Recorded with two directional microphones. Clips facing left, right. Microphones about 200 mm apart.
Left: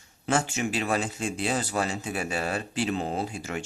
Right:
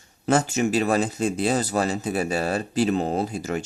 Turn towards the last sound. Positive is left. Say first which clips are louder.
# right 6 dB
turn(degrees=-40)  # may be behind; listen again after turning